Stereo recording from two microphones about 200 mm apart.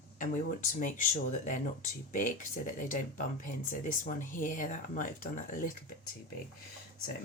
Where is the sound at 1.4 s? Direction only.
40° left (ahead or behind).